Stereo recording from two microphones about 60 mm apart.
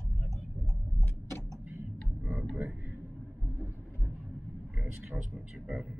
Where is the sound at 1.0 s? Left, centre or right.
Left.